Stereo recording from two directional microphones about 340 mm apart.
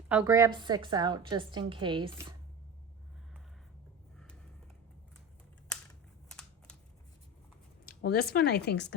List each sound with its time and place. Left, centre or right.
0.1 s a woman's voice: centre
6.2 s a sound: centre
7.9 s speech: left